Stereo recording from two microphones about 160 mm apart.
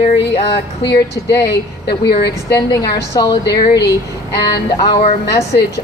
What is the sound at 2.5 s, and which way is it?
A woman's voice, 20° left (ahead or behind).